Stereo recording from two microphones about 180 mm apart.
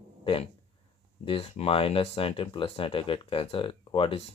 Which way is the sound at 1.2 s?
30° left (ahead or behind).